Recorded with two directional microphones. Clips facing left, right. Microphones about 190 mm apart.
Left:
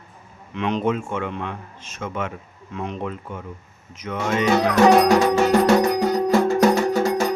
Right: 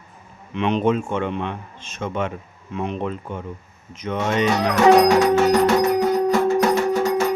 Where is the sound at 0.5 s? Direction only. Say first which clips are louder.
Right 3 dB; 20° right (ahead or behind).